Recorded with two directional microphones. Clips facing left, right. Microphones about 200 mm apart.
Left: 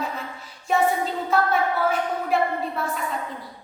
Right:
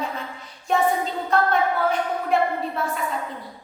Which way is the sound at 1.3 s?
5° left (ahead or behind).